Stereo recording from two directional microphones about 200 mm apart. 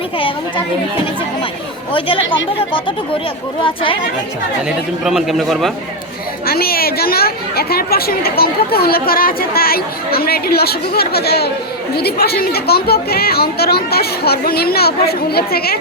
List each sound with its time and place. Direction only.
0.2 s a child's voice: 25° left (ahead or behind)
1.9 s a child's voice: 25° left (ahead or behind)
5.0 s a man's voice: centre (ahead or behind)
6.4 s a woman's voice: 50° left (ahead or behind)